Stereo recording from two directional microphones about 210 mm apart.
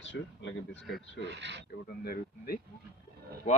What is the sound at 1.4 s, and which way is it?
Speech, 55° right (ahead or behind).